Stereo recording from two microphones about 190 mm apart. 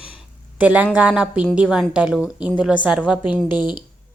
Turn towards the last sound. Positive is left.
turn(degrees=20)  # may be behind; listen again after turning